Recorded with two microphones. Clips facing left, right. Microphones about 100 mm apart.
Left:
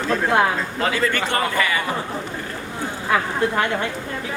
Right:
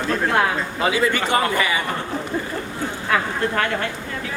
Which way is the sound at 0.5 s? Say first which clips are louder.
Right 1 dB; 10° right (ahead or behind).